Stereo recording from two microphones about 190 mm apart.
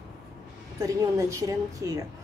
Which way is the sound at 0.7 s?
15° right (ahead or behind).